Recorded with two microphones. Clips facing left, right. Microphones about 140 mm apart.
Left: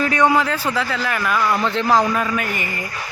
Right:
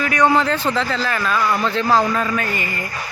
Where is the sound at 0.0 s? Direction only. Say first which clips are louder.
Even; 30° left (ahead or behind).